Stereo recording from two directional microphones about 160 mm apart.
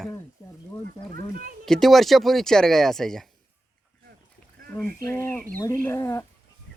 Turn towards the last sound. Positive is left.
turn(degrees=15)  # may be behind; listen again after turning